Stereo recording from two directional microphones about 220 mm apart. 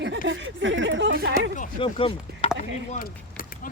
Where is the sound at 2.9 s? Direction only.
40° left (ahead or behind).